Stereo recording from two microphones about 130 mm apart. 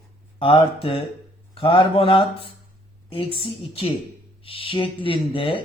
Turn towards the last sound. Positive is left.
turn(degrees=40)  # may be behind; listen again after turning